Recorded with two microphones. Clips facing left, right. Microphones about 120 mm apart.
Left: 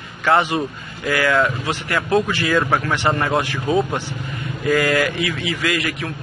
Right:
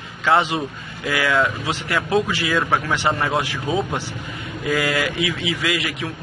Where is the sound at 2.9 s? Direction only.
10° right (ahead or behind).